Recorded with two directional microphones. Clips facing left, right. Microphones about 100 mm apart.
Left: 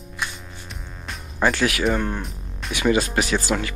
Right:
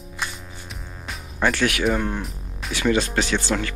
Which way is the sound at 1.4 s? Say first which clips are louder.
Left 1 dB; 15° left (ahead or behind).